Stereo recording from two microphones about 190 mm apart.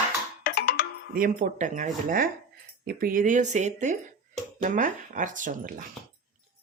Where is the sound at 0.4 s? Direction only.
50° left (ahead or behind).